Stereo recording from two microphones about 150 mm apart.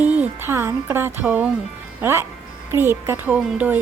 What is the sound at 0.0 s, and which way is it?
Speech, 10° right (ahead or behind).